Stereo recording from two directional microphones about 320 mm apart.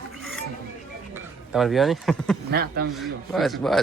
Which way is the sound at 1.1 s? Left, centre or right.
Centre.